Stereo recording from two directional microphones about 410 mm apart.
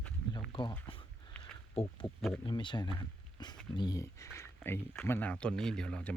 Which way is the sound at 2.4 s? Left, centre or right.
Centre.